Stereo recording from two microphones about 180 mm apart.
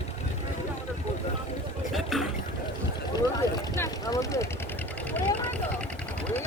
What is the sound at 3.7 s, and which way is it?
Vehicle, 20° left (ahead or behind).